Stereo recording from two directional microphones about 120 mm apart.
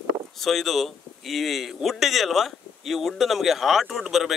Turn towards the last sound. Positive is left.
turn(degrees=0)  # may be behind; listen again after turning